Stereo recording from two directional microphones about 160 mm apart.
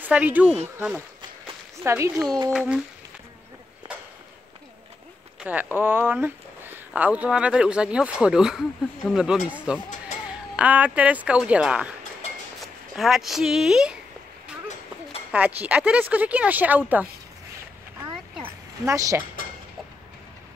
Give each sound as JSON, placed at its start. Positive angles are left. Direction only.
{"t": 0.0, "sound": "speech", "side_deg": -10}
{"t": 5.4, "sound": "speech", "side_deg": -10}
{"t": 12.9, "sound": "speech", "side_deg": 0}
{"t": 15.3, "sound": "speech", "side_deg": -10}
{"t": 18.9, "sound": "speech", "side_deg": -20}